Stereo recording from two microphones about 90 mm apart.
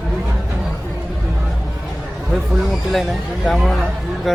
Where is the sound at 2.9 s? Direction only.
Centre (ahead or behind).